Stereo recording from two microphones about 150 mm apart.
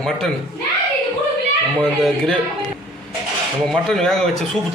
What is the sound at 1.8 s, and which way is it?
Speech, 5° left (ahead or behind).